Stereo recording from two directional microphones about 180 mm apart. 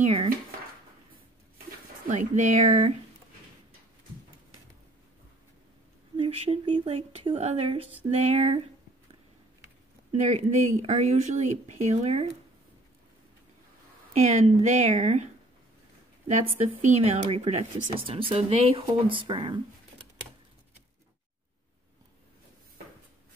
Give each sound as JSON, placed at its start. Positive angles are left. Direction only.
{"t": 0.0, "sound": "speech", "side_deg": -35}
{"t": 2.0, "sound": "speech", "side_deg": -40}
{"t": 6.1, "sound": "speech", "side_deg": -30}
{"t": 10.2, "sound": "speech", "side_deg": -35}
{"t": 14.1, "sound": "speech", "side_deg": -40}
{"t": 16.3, "sound": "speech", "side_deg": -40}